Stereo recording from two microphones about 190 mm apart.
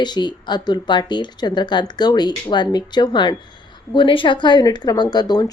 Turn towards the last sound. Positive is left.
turn(degrees=20)  # may be behind; listen again after turning